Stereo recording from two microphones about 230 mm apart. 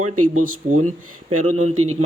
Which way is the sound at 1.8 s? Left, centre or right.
Right.